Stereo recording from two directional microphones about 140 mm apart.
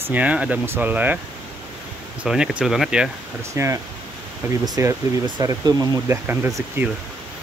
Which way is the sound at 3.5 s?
20° right (ahead or behind).